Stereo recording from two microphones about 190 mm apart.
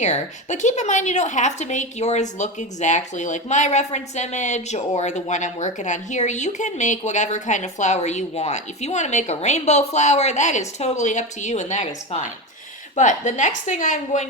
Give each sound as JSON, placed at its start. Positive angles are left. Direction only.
{"t": 0.0, "sound": "a woman's voice", "side_deg": 40}